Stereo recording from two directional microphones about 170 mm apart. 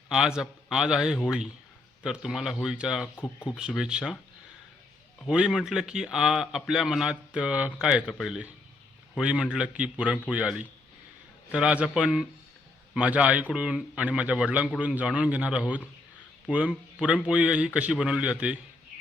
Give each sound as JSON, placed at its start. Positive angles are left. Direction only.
{"t": 0.1, "sound": "a man's voice", "side_deg": -5}
{"t": 5.2, "sound": "a man's voice", "side_deg": 0}